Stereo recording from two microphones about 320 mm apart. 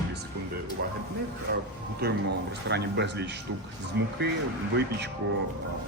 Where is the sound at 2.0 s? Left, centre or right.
Right.